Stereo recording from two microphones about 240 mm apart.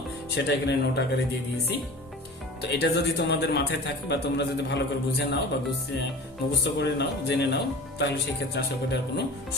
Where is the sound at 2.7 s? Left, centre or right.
Left.